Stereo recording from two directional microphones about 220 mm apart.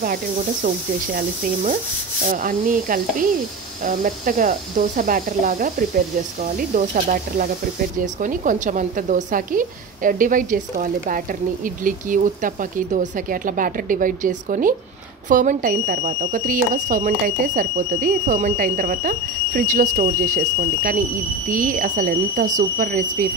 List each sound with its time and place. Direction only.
1.1 s a woman's voice: 40° right (ahead or behind)